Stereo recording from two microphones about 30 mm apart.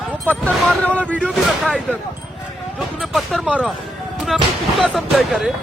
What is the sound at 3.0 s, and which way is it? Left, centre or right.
Speech, centre.